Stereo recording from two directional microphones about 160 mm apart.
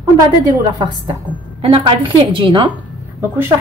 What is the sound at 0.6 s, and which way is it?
Speech, 25° right (ahead or behind).